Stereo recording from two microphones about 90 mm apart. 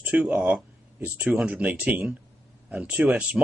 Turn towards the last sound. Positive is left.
turn(degrees=-15)  # may be behind; listen again after turning